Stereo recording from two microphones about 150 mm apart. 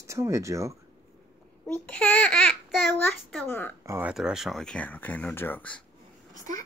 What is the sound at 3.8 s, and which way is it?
Speech, 15° right (ahead or behind).